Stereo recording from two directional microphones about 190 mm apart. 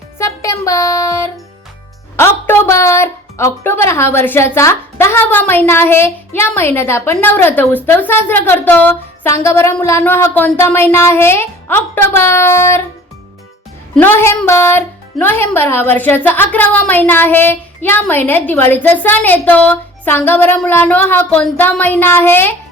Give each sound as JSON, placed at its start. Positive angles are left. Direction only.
{"t": 0.2, "sound": "a woman's voice", "side_deg": 15}
{"t": 13.9, "sound": "a woman's voice", "side_deg": 10}